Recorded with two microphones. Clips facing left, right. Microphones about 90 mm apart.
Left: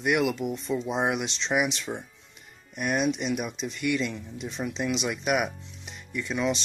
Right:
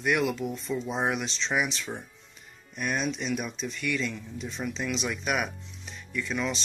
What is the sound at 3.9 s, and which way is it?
Speech, 20° left (ahead or behind).